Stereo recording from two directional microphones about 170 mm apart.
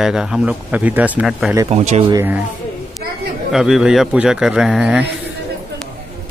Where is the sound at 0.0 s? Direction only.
5° right (ahead or behind).